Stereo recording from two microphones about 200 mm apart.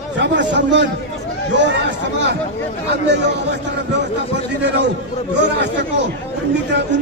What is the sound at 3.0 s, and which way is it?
Chatter, 60° right (ahead or behind).